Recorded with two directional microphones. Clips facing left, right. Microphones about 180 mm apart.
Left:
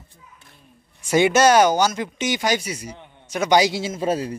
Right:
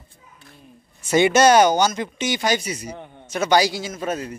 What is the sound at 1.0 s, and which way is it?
A man's voice, 5° left (ahead or behind).